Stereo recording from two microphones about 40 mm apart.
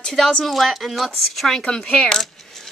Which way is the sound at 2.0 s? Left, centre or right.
Centre.